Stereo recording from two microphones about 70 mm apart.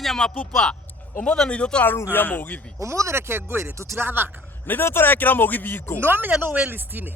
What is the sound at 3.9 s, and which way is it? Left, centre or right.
Speech, right.